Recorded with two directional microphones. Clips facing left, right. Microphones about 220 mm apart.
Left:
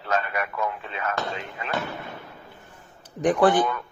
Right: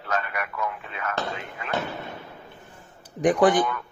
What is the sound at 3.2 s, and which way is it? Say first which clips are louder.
Speech: even; 15° right (ahead or behind).